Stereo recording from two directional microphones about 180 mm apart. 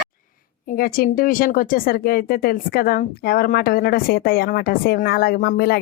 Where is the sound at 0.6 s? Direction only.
55° left (ahead or behind).